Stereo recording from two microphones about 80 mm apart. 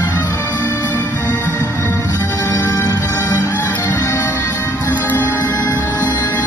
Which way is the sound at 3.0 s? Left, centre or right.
Left.